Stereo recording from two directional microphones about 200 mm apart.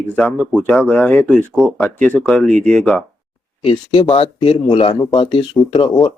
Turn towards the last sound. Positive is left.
turn(degrees=20)  # may be behind; listen again after turning